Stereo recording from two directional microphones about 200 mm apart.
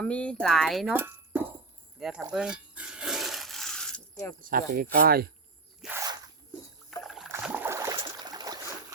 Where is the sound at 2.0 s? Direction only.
Centre (ahead or behind).